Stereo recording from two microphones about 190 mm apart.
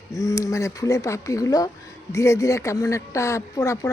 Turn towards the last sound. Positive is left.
turn(degrees=15)  # may be behind; listen again after turning